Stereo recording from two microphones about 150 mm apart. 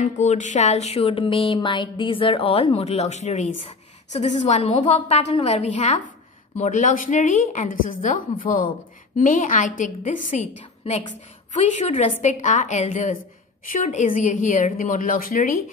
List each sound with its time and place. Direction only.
0.0 s music: 50° left (ahead or behind)
6.6 s a woman's voice: 60° left (ahead or behind)
11.5 s music: 50° left (ahead or behind)
13.7 s a woman's voice: 55° left (ahead or behind)